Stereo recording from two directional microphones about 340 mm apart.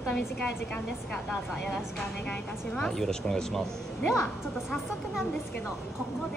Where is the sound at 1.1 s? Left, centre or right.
Centre.